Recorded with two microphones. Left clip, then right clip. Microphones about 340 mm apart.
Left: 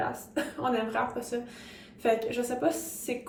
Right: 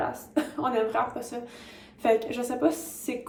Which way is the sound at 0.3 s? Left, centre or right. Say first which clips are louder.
Right 3 dB; centre.